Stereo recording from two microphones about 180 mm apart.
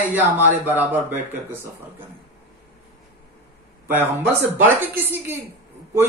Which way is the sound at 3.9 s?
10° right (ahead or behind).